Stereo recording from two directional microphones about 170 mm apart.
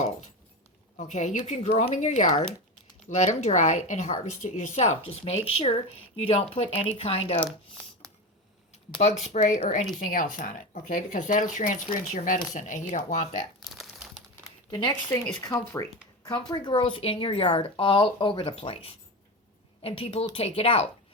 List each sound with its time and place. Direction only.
0.9 s speech: 45° left (ahead or behind)
9.0 s speech: 40° left (ahead or behind)
13.7 s crumpling: centre (ahead or behind)
14.7 s speech: 25° left (ahead or behind)